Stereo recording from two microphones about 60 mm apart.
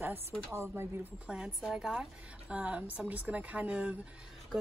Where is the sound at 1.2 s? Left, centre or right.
Centre.